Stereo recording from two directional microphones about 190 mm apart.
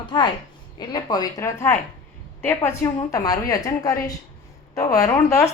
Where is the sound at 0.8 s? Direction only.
20° left (ahead or behind).